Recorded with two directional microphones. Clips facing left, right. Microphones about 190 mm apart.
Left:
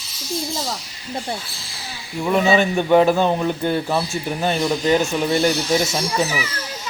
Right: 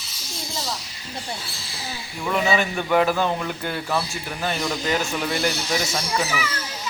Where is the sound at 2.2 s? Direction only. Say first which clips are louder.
Left 5 dB; 25° left (ahead or behind).